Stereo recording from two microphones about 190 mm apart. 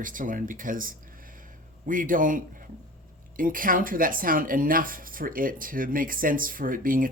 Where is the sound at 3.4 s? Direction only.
45° right (ahead or behind).